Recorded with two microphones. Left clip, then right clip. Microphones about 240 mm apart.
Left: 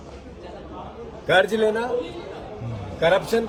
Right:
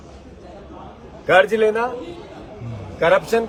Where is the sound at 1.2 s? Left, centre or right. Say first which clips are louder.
Right 4 dB; right.